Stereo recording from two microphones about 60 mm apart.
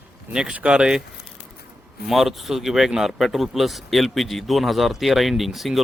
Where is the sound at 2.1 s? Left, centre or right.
Centre.